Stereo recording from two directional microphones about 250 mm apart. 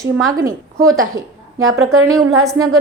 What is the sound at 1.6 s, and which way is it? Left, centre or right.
Speech, right.